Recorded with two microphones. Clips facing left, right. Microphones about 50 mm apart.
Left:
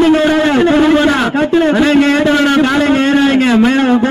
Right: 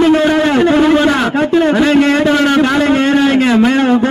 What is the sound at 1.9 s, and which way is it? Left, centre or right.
Speech, left.